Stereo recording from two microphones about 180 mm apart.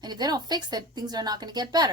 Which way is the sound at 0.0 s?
25° right (ahead or behind).